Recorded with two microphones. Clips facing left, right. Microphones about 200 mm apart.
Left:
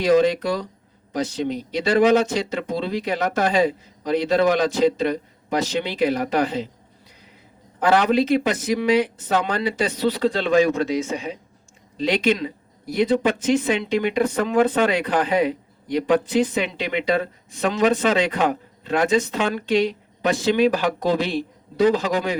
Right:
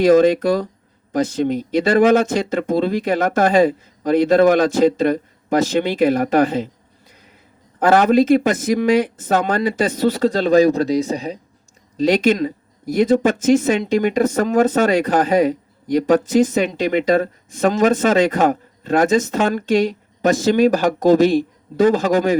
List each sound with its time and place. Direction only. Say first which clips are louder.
0.0 s speech: right 5 dB; 50° right (ahead or behind)
7.8 s speech: right 5 dB; 45° right (ahead or behind)